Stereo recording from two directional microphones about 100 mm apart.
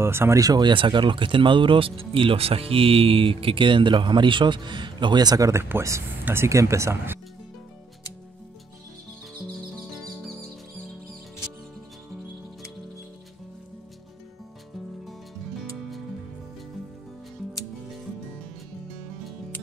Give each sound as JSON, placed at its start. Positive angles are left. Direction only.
{"t": 0.0, "sound": "speech", "side_deg": -25}
{"t": 0.4, "sound": "speech", "side_deg": -40}
{"t": 10.0, "sound": "music", "side_deg": 5}